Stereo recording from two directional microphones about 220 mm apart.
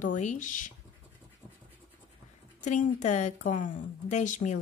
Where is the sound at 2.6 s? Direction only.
30° left (ahead or behind).